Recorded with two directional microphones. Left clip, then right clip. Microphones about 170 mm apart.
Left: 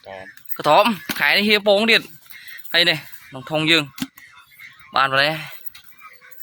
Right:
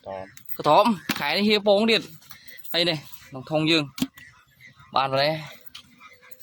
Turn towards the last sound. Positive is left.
turn(degrees=0)  # may be behind; listen again after turning